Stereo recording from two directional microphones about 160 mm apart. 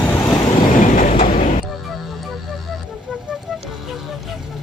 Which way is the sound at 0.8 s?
50° left (ahead or behind).